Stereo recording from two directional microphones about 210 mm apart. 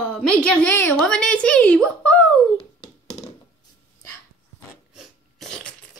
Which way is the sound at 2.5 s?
30° left (ahead or behind).